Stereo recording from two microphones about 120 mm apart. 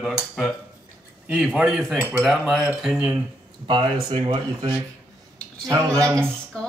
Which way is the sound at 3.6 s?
45° right (ahead or behind).